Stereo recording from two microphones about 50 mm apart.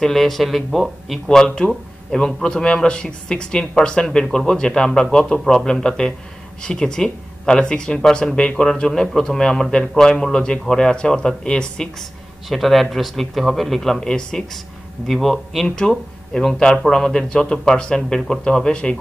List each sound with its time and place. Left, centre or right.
0.0 s speech: centre
1.4 s speech: centre
12.4 s speech: centre
14.0 s speech: centre
15.0 s speech: centre
15.7 s speech: centre